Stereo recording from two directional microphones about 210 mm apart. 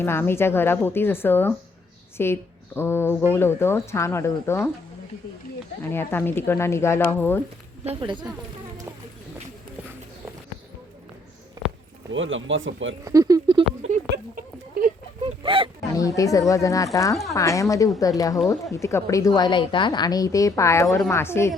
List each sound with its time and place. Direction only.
0.0 s a woman's voice: 10° left (ahead or behind)
5.8 s a woman's voice: 10° left (ahead or behind)
7.9 s a woman's voice: 25° right (ahead or behind)
11.6 s a sound: 20° right (ahead or behind)
12.1 s speech: 65° right (ahead or behind)
13.1 s speech: 15° right (ahead or behind)
13.8 s a sound: 40° right (ahead or behind)
15.4 s a sound: 25° right (ahead or behind)
16.0 s a woman's voice: 15° left (ahead or behind)